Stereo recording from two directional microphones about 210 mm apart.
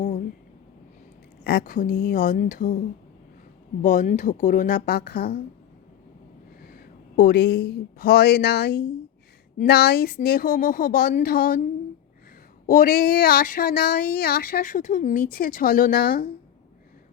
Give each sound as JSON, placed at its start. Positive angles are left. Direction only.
{"t": 1.5, "sound": "speech", "side_deg": 45}
{"t": 3.8, "sound": "speech", "side_deg": 35}
{"t": 6.6, "sound": "speech", "side_deg": 45}
{"t": 12.6, "sound": "speech", "side_deg": 40}